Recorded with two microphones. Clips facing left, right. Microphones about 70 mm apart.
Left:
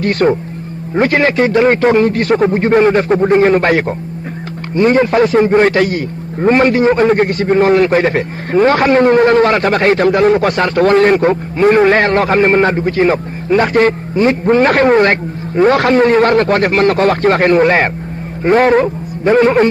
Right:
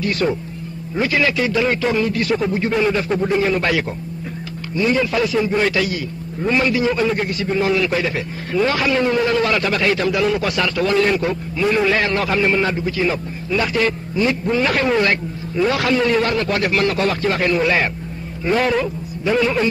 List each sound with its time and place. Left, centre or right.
0.0 s a man's voice: left